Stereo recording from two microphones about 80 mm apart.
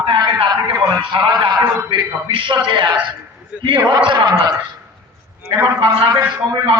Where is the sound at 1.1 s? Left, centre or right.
Right.